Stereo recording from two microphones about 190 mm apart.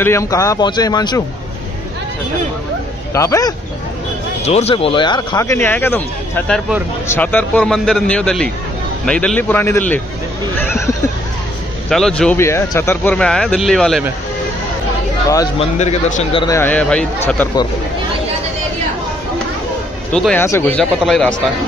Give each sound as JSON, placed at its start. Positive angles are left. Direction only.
{"t": 0.0, "sound": "a man's voice", "side_deg": 15}
{"t": 3.2, "sound": "a man's voice", "side_deg": 15}
{"t": 4.5, "sound": "a man's voice", "side_deg": 35}
{"t": 10.6, "sound": "a sound", "side_deg": 10}
{"t": 11.9, "sound": "speech", "side_deg": 5}
{"t": 15.6, "sound": "a man's voice", "side_deg": 35}
{"t": 16.4, "sound": "a man's voice", "side_deg": 10}
{"t": 20.1, "sound": "a man's voice", "side_deg": 5}
{"t": 21.0, "sound": "speech", "side_deg": 0}